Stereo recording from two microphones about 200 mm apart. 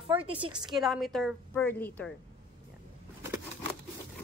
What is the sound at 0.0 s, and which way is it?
Speech, 25° right (ahead or behind).